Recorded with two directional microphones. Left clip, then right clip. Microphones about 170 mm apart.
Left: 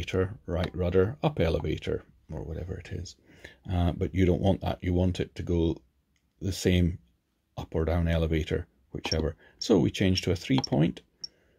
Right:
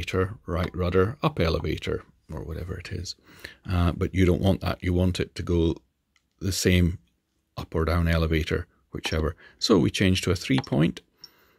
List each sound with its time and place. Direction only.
0.0 s speech: 25° right (ahead or behind)